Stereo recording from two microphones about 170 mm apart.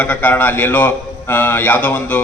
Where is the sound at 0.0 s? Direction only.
10° left (ahead or behind).